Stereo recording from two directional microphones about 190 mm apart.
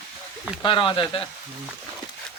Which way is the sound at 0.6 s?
25° left (ahead or behind).